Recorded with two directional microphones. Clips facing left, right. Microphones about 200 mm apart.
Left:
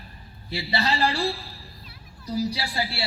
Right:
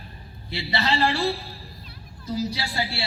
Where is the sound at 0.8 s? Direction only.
25° right (ahead or behind).